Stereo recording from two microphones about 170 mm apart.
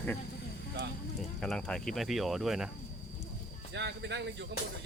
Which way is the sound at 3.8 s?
90° right.